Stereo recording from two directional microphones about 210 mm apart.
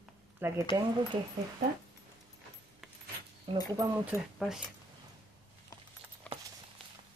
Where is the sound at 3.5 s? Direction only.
25° right (ahead or behind).